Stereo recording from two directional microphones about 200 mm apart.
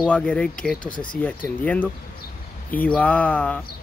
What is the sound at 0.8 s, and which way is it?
Speech, 25° left (ahead or behind).